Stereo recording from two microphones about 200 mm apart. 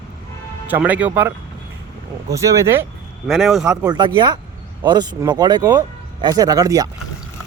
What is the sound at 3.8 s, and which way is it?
Speech, 20° right (ahead or behind).